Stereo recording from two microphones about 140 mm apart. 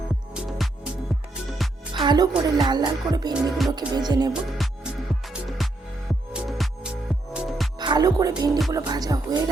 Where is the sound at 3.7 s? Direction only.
30° right (ahead or behind).